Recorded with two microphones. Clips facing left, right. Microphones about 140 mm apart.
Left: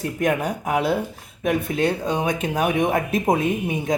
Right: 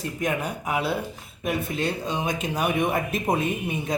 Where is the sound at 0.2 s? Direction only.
50° left (ahead or behind).